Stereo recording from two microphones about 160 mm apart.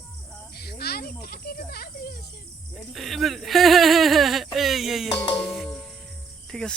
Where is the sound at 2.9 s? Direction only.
Centre (ahead or behind).